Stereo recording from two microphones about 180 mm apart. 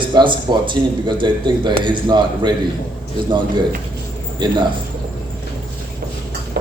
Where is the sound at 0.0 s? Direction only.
25° right (ahead or behind).